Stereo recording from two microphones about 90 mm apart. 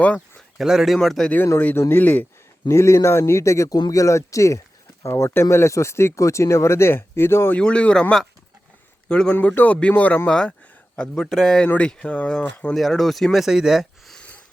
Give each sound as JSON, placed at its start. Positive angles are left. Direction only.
{"t": 0.0, "sound": "a sound", "side_deg": 15}
{"t": 0.6, "sound": "speech", "side_deg": -5}
{"t": 1.8, "sound": "speech", "side_deg": 25}
{"t": 2.6, "sound": "speech", "side_deg": 30}
{"t": 7.6, "sound": "a man's voice", "side_deg": 10}
{"t": 12.7, "sound": "speech", "side_deg": 0}
{"t": 14.2, "sound": "a sound", "side_deg": 15}